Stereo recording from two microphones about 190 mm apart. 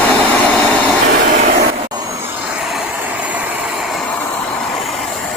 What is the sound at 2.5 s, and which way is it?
Vehicle, 5° right (ahead or behind).